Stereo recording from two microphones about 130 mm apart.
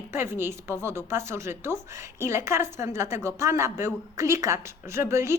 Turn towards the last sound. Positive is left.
turn(degrees=-20)  # may be behind; listen again after turning